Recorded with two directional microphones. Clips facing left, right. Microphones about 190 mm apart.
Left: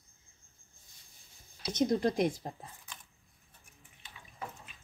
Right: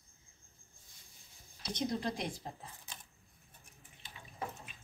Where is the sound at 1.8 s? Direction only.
45° left (ahead or behind).